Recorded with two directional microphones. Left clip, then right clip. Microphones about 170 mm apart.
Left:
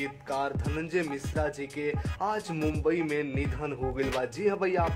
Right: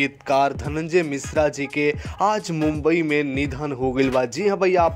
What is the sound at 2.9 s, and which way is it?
Speech, 40° right (ahead or behind).